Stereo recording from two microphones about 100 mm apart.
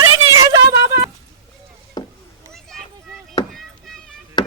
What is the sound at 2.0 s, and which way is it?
Chop, 40° left (ahead or behind).